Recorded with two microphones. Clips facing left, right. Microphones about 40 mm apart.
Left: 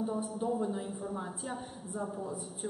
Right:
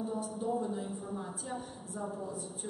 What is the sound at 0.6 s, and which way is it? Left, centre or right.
Speech, centre.